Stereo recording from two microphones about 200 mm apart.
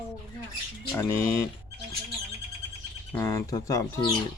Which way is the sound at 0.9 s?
15° left (ahead or behind).